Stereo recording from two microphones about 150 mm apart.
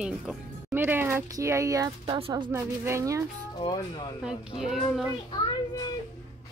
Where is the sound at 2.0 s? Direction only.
35° right (ahead or behind).